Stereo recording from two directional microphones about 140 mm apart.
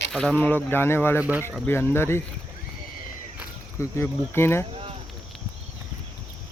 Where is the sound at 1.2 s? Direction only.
10° right (ahead or behind).